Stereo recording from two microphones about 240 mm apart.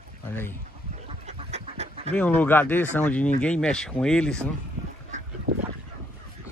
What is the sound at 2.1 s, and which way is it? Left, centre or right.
Speech, centre.